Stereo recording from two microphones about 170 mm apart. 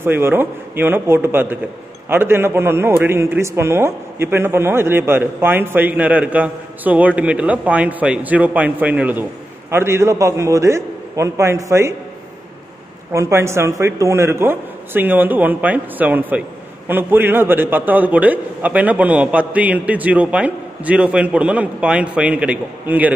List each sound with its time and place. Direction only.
0.0 s a man's voice: 15° right (ahead or behind)
13.1 s a man's voice: 15° right (ahead or behind)